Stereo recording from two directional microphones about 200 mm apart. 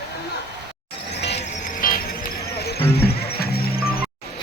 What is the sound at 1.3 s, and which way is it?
Music, 40° left (ahead or behind).